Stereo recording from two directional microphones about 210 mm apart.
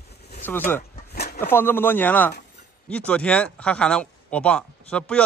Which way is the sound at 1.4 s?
10° left (ahead or behind).